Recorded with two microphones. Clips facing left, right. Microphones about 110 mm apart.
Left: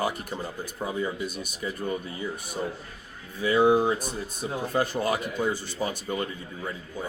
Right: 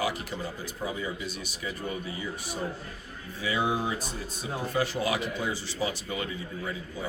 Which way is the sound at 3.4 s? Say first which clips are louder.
Left 8 dB; 45° left (ahead or behind).